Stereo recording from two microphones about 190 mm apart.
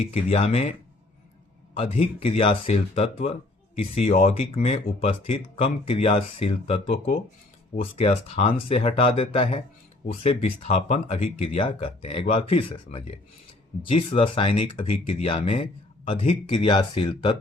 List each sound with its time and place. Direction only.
0.0 s speech: 30° left (ahead or behind)
1.7 s speech: 30° left (ahead or behind)